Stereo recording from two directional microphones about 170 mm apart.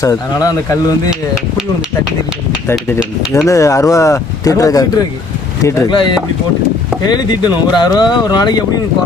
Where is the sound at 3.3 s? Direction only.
20° left (ahead or behind).